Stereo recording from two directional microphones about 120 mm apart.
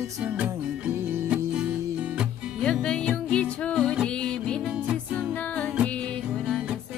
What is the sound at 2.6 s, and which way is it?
Music, 5° left (ahead or behind).